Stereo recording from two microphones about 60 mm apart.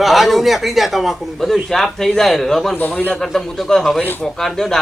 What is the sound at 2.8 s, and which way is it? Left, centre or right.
Speech, left.